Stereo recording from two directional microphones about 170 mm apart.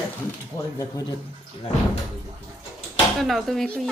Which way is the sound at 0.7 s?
20° left (ahead or behind).